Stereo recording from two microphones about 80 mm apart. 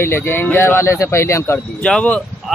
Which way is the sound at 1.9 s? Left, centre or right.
Centre.